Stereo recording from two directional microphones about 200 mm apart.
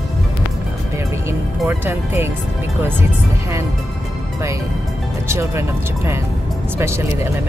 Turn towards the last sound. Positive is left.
turn(degrees=-15)  # may be behind; listen again after turning